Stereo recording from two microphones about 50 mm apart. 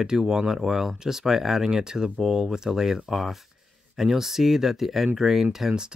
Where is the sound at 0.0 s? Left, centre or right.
Centre.